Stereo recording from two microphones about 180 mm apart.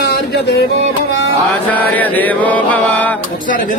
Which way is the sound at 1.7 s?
10° left (ahead or behind).